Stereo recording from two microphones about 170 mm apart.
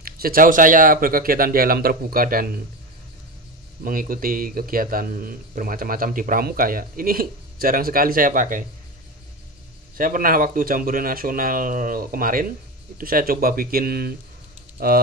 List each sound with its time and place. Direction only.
0.0 s speech: 60° right (ahead or behind)
3.8 s speech: 55° right (ahead or behind)
9.9 s speech: 55° right (ahead or behind)